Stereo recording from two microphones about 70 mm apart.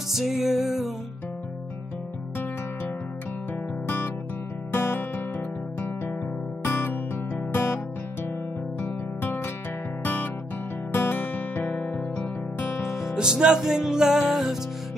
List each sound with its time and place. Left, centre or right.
0.1 s music: centre
3.8 s music: left
6.6 s music: left
12.9 s music: centre